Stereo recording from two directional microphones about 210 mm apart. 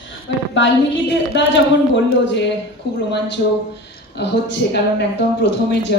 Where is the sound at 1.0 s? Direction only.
55° left (ahead or behind).